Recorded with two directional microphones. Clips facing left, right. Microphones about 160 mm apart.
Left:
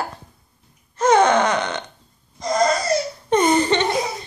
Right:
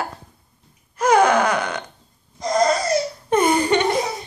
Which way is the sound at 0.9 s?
25° left (ahead or behind).